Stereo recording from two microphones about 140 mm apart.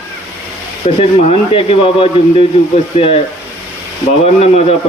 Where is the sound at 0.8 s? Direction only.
40° left (ahead or behind).